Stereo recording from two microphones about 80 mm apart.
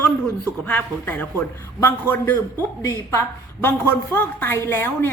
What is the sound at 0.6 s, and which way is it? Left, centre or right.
A woman's voice, left.